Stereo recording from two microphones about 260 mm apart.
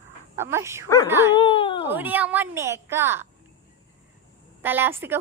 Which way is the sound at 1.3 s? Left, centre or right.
Centre.